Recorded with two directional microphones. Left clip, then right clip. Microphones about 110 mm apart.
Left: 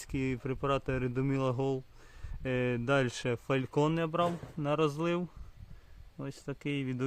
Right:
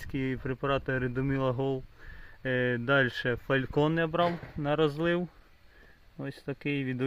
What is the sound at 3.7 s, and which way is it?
Speech, 15° right (ahead or behind).